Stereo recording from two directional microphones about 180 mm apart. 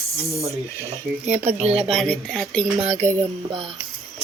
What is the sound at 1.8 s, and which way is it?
Speech, centre (ahead or behind).